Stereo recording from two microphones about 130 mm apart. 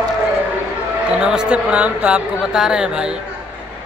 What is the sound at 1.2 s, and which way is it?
Speech, 5° right (ahead or behind).